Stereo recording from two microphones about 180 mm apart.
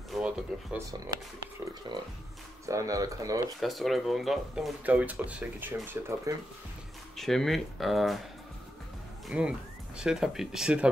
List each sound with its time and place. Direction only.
0.1 s a sound: 5° right (ahead or behind)
0.7 s speech: 15° right (ahead or behind)
1.9 s speech: 25° right (ahead or behind)
3.6 s speech: centre (ahead or behind)
7.2 s speech: centre (ahead or behind)
9.3 s speech: 5° right (ahead or behind)